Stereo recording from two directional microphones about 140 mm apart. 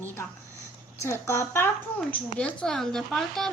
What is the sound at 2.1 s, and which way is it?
A woman's voice, 10° left (ahead or behind).